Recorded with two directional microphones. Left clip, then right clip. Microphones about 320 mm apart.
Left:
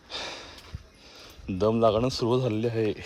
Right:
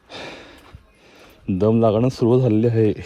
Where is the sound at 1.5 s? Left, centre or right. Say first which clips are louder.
Right 5 dB; right.